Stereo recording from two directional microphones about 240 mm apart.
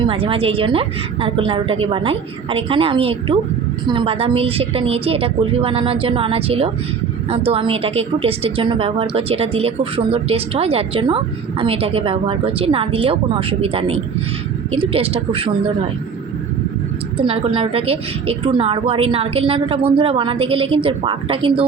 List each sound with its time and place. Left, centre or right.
0.0 s a woman's voice: right
17.2 s a woman's voice: right